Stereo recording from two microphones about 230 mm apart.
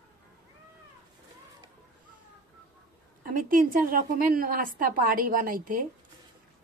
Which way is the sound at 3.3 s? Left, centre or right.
Right.